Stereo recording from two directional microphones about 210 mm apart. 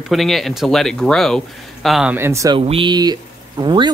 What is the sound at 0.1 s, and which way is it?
Speech, centre (ahead or behind).